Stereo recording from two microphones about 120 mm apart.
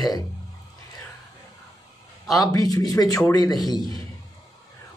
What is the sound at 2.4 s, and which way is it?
A man's voice, 30° left (ahead or behind).